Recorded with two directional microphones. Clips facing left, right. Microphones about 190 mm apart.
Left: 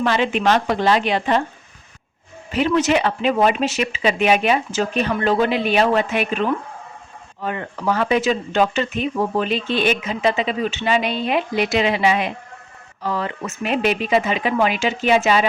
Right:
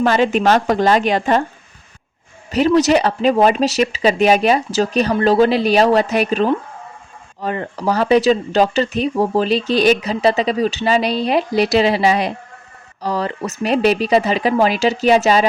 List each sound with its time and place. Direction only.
0.0 s speech: 40° right (ahead or behind)
2.5 s speech: 40° right (ahead or behind)